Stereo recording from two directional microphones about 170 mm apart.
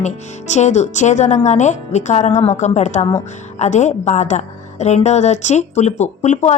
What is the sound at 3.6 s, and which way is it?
Speech, 45° left (ahead or behind).